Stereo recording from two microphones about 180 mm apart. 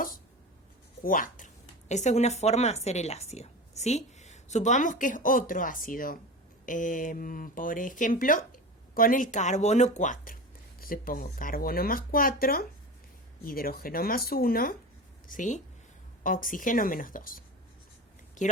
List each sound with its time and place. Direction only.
1.0 s a woman's voice: 50° left (ahead or behind)